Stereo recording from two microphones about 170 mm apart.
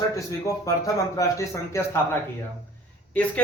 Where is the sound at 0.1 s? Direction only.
20° left (ahead or behind).